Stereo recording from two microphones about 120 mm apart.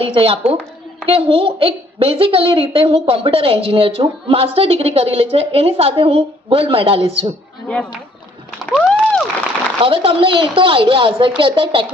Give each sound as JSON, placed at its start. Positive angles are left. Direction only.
{"t": 0.0, "sound": "a woman's voice", "side_deg": -50}
{"t": 8.7, "sound": "a sound", "side_deg": 5}
{"t": 9.8, "sound": "a woman's voice", "side_deg": -50}